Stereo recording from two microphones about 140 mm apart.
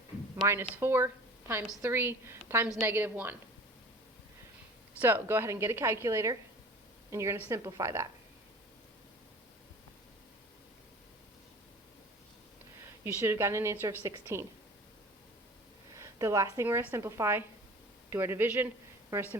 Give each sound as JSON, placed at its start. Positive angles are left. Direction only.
{"t": 0.8, "sound": "a woman's voice", "side_deg": -15}
{"t": 4.9, "sound": "a woman's voice", "side_deg": -15}
{"t": 12.8, "sound": "a woman's voice", "side_deg": -20}
{"t": 16.0, "sound": "a woman's voice", "side_deg": -20}